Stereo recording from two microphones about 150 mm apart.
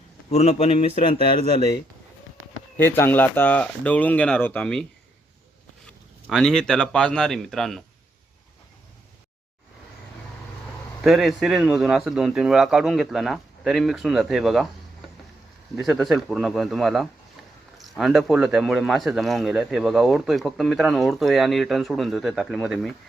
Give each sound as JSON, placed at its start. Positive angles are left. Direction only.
{"t": 0.3, "sound": "a man's voice", "side_deg": 45}
{"t": 2.7, "sound": "speech", "side_deg": 15}
{"t": 6.3, "sound": "speech", "side_deg": 5}
{"t": 11.0, "sound": "speech", "side_deg": 0}
{"t": 15.7, "sound": "speech", "side_deg": 0}